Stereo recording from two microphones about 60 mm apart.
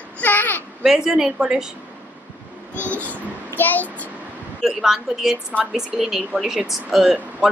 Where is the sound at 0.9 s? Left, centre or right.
Centre.